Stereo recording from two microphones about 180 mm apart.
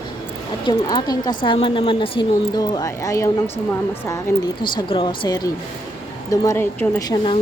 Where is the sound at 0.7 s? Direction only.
20° left (ahead or behind).